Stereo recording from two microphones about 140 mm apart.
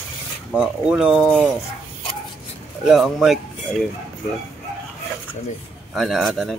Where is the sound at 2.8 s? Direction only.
5° right (ahead or behind).